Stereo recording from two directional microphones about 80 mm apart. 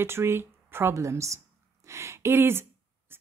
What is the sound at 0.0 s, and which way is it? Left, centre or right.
A woman's voice, right.